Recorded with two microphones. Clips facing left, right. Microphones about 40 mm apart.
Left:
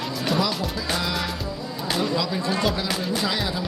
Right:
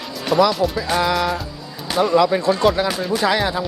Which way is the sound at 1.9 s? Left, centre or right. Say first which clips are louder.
Right 11 dB; right.